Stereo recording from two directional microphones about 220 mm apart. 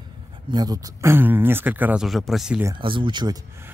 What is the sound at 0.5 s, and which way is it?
Speech, 15° right (ahead or behind).